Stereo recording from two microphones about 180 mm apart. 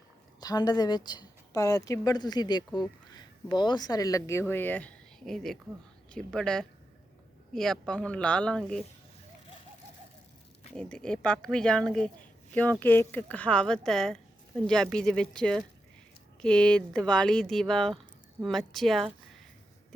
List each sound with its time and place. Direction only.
0.3 s a woman's voice: 20° left (ahead or behind); by 8.8 s 5° left (ahead or behind)
10.8 s a woman's voice: 5° left (ahead or behind)